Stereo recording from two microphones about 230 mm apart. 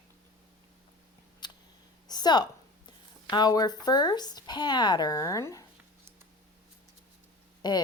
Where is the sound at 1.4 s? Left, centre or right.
Centre.